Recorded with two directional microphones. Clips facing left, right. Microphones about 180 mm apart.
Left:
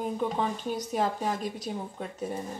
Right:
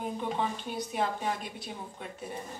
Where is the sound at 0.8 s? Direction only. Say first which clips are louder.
Left 1 dB; 40° left (ahead or behind).